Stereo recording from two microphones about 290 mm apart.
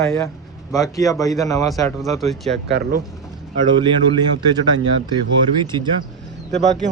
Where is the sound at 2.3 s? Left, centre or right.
Centre.